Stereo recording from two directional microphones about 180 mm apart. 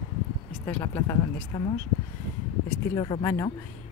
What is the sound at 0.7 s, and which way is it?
Speech, 10° left (ahead or behind).